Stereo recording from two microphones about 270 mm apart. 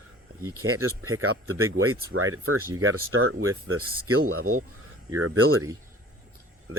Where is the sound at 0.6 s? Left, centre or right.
Right.